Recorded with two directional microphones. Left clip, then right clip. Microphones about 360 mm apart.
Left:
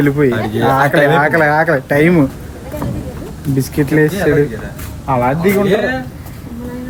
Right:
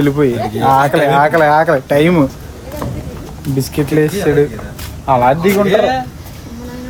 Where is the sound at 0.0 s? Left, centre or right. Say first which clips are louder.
Even; centre.